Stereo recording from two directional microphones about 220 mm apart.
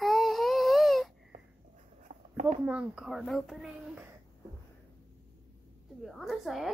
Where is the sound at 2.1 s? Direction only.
25° right (ahead or behind).